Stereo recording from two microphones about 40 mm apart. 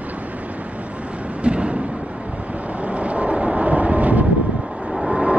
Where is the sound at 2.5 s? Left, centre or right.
Right.